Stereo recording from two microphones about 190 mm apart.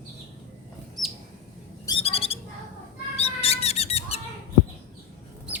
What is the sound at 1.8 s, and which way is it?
Owl, 30° left (ahead or behind).